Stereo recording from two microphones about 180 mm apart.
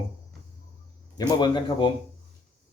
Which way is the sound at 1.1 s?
25° left (ahead or behind).